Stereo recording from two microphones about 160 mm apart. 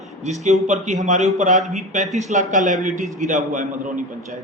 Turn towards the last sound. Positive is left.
turn(degrees=-50)  # may be behind; listen again after turning